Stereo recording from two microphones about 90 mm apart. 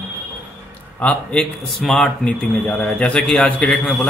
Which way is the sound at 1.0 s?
5° left (ahead or behind).